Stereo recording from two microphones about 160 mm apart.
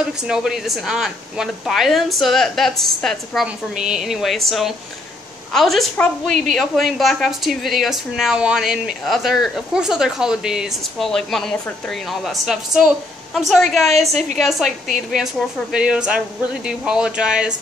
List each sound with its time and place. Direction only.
0.3 s a woman's voice: 5° right (ahead or behind)
13.8 s a woman's voice: 40° right (ahead or behind)
14.4 s a woman's voice: centre (ahead or behind)